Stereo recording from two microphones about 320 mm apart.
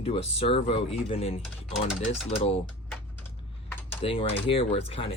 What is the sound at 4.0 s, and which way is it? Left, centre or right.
Speech, centre.